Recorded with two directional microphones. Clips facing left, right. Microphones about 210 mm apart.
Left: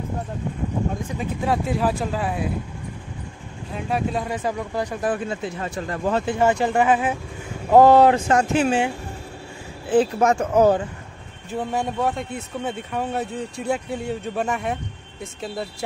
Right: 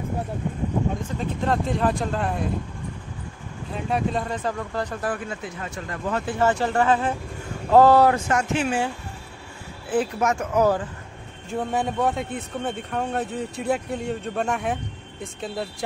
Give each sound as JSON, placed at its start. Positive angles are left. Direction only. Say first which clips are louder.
{"t": 1.1, "sound": "speech", "louder": "left 1 dB", "side_deg": 10}
{"t": 3.7, "sound": "speech", "louder": "even", "side_deg": 0}
{"t": 5.1, "sound": "speech", "louder": "left 5 dB", "side_deg": 25}
{"t": 6.3, "sound": "speech", "louder": "left 1 dB", "side_deg": 15}
{"t": 9.8, "sound": "speech", "louder": "left 5 dB", "side_deg": 30}
{"t": 11.5, "sound": "speech", "louder": "even", "side_deg": 0}